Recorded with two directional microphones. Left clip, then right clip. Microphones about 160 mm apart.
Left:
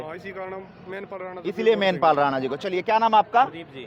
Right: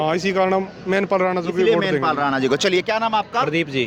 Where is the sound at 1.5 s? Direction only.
70° left (ahead or behind).